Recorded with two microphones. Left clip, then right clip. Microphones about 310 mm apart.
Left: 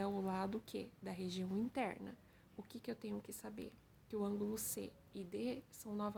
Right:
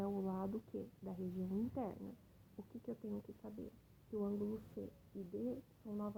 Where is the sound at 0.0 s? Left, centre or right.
Left.